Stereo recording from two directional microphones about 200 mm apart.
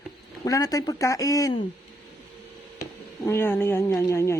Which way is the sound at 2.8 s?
15° left (ahead or behind).